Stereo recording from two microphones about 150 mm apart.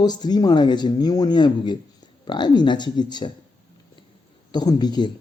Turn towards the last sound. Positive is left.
turn(degrees=30)  # may be behind; listen again after turning